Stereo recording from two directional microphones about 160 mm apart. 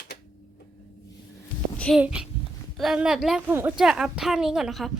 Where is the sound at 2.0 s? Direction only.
5° right (ahead or behind).